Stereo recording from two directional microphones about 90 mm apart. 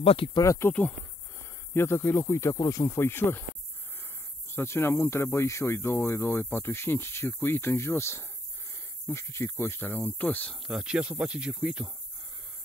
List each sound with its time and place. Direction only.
0.0 s speech: 90° left
0.4 s speech: 35° left (ahead or behind)
4.5 s speech: 25° left (ahead or behind)
10.5 s speech: 5° right (ahead or behind)